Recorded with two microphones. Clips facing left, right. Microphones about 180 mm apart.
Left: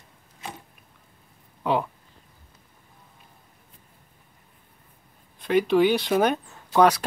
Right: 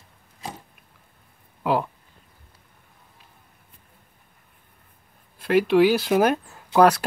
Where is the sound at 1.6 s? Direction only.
5° right (ahead or behind).